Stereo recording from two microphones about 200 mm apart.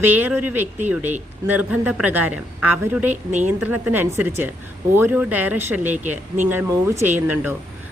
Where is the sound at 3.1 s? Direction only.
35° right (ahead or behind).